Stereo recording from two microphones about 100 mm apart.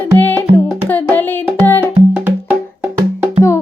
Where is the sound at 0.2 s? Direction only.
20° left (ahead or behind).